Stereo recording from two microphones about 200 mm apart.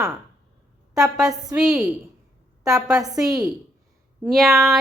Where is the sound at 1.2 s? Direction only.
15° right (ahead or behind).